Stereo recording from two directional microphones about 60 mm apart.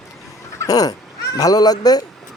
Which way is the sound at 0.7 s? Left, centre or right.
Left.